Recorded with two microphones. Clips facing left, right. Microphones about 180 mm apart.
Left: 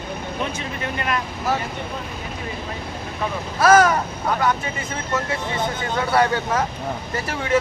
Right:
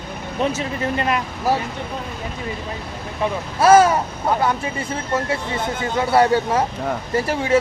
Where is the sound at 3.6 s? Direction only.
30° right (ahead or behind).